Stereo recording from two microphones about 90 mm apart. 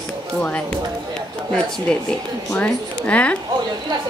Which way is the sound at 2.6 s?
15° left (ahead or behind).